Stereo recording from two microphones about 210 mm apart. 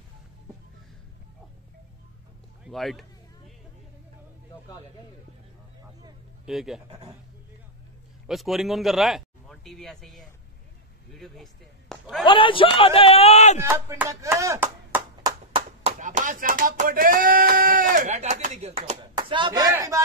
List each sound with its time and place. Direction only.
2.6 s a sound: centre (ahead or behind)
6.4 s speech: centre (ahead or behind)
6.9 s a man's voice: 20° right (ahead or behind)
8.3 s a man's voice: centre (ahead or behind)
12.3 s a man's voice: 25° left (ahead or behind)
13.6 s speech: 15° right (ahead or behind)
15.2 s clapping: 25° right (ahead or behind)
16.0 s a sound: 40° right (ahead or behind)
19.1 s speech: 20° right (ahead or behind)